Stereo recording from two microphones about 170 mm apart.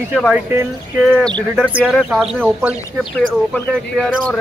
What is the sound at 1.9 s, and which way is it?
Speech, centre (ahead or behind).